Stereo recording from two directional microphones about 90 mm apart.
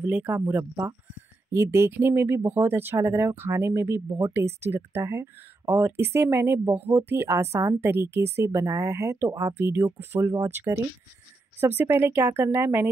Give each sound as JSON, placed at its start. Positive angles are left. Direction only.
{"t": 0.0, "sound": "speech", "side_deg": -20}